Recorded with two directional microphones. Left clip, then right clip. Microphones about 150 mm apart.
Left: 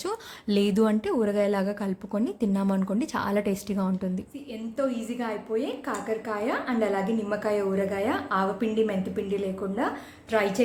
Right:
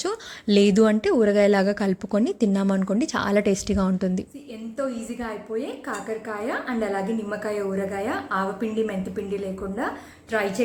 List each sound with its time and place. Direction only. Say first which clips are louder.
0.0 s speech: right 4 dB; 25° right (ahead or behind)
4.8 s a woman's voice: even; 5° left (ahead or behind)